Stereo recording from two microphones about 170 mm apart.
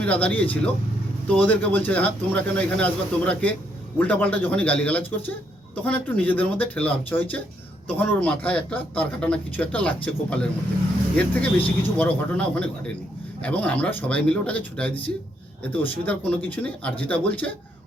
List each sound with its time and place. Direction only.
0.0 s speech: 10° left (ahead or behind)